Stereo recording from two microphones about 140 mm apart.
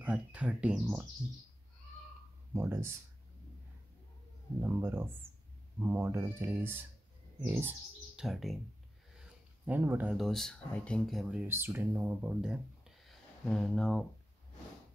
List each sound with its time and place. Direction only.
0.0 s speech: 10° right (ahead or behind)
2.5 s speech: 20° right (ahead or behind)
4.6 s speech: 15° right (ahead or behind)
8.2 s speech: centre (ahead or behind)
9.7 s speech: 15° right (ahead or behind)
10.1 s speech: centre (ahead or behind)